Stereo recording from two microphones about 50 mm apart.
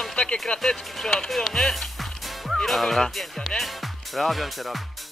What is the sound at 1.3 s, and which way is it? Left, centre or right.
Music, centre.